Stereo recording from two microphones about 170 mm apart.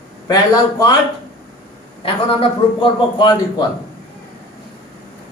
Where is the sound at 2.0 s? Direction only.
30° left (ahead or behind).